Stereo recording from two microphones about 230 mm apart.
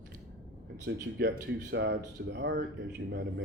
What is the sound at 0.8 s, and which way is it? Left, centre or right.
Speech, right.